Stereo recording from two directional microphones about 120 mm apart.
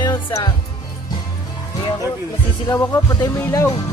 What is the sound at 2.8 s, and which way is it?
Music, 25° left (ahead or behind).